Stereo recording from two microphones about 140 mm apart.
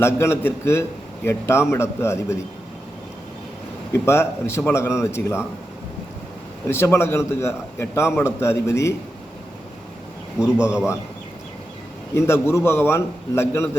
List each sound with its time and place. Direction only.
0.0 s a man's voice: 20° left (ahead or behind)
3.9 s a man's voice: 20° left (ahead or behind)
6.7 s a man's voice: 20° left (ahead or behind)
10.4 s a man's voice: 5° right (ahead or behind)
12.1 s a man's voice: 20° left (ahead or behind)